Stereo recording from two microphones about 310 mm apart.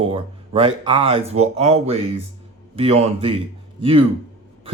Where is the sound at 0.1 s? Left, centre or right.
Centre.